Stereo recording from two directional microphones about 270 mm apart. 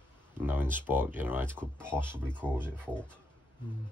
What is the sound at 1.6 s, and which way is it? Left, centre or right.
Speech, centre.